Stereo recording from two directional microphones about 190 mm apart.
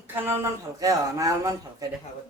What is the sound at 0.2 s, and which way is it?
Speech, 10° right (ahead or behind).